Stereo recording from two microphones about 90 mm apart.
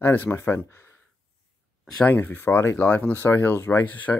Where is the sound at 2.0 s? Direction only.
20° left (ahead or behind).